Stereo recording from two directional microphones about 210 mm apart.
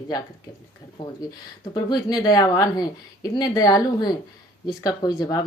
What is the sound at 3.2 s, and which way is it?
A woman's voice, 20° left (ahead or behind).